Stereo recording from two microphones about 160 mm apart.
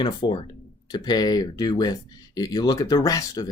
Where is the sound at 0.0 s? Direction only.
30° left (ahead or behind).